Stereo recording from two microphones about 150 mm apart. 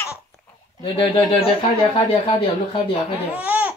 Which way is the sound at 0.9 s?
35° left (ahead or behind).